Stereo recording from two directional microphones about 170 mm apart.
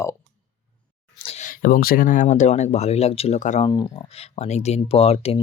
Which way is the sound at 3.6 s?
25° left (ahead or behind).